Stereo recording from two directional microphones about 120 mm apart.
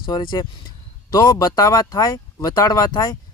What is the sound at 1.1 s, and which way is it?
Speech, 30° left (ahead or behind).